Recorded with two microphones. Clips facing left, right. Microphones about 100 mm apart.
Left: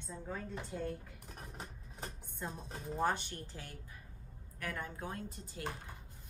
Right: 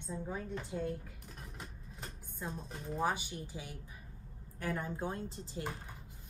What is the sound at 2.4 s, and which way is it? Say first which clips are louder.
Speech: right 1 dB; centre (ahead or behind).